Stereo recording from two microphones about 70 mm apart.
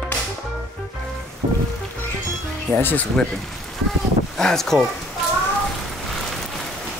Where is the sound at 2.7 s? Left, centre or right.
Left.